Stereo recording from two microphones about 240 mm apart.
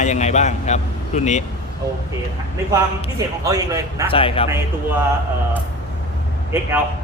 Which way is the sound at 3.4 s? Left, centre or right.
Centre.